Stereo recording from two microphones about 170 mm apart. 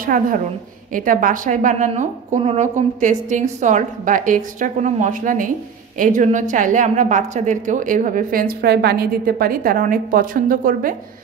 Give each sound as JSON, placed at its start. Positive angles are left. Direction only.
{"t": 0.0, "sound": "a woman's voice", "side_deg": -55}